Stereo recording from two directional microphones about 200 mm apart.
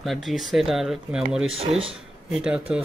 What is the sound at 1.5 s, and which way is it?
Speech, 30° right (ahead or behind).